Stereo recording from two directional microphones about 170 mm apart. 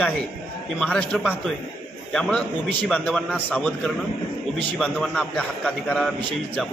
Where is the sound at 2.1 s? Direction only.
5° left (ahead or behind).